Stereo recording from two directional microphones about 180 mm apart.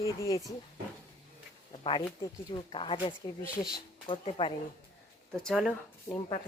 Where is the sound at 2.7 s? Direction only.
30° left (ahead or behind).